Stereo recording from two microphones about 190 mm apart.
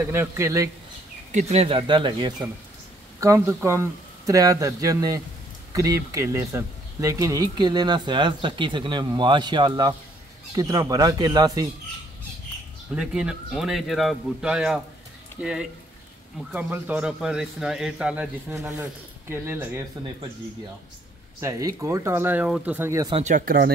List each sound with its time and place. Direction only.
0.0 s speech: 10° right (ahead or behind)
1.3 s speech: 35° right (ahead or behind)
12.9 s speech: 5° right (ahead or behind)
21.4 s speech: 15° right (ahead or behind)
23.1 s speech: 40° right (ahead or behind)